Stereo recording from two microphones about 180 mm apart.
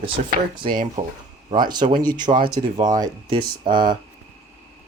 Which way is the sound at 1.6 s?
25° right (ahead or behind).